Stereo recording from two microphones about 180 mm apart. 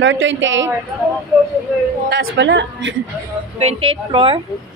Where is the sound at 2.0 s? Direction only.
70° right (ahead or behind); by 3.0 s 90° right.